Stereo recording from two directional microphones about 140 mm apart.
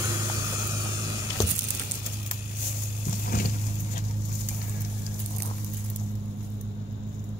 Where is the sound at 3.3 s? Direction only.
90° left.